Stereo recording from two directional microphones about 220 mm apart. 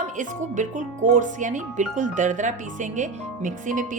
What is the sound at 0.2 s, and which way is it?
Speech, 35° right (ahead or behind).